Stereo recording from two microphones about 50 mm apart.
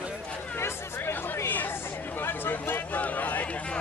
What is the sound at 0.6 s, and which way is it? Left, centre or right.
Speech, left.